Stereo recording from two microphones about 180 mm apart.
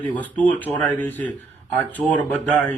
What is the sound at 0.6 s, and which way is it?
Speech, 10° left (ahead or behind).